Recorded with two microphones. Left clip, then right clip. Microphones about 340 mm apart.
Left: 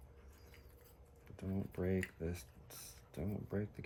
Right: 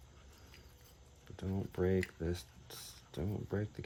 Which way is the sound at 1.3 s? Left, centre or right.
Right.